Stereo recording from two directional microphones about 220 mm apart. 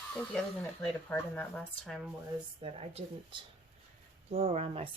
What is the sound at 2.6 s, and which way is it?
Speech, 25° right (ahead or behind).